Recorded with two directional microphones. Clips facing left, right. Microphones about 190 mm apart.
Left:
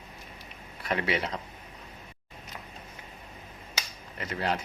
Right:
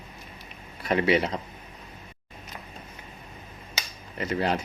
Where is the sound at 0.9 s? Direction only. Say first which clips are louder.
Right 7 dB; 25° right (ahead or behind).